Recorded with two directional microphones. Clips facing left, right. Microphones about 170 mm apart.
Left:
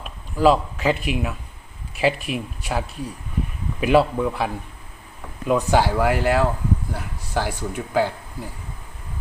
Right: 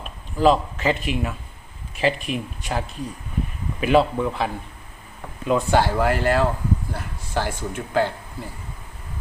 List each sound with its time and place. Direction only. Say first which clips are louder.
0.0 s a man's voice: left 1 dB; 5° left (ahead or behind)